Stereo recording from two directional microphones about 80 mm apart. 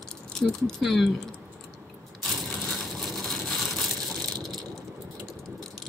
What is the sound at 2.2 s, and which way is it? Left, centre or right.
Crushing, centre.